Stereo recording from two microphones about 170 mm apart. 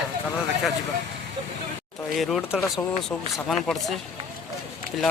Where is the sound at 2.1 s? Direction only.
Centre (ahead or behind).